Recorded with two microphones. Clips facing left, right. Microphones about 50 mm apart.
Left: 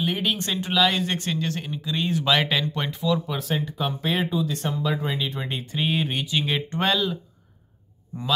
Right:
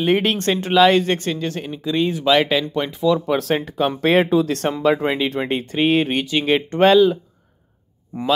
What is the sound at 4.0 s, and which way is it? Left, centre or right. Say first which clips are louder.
Speech: right 10 dB; right.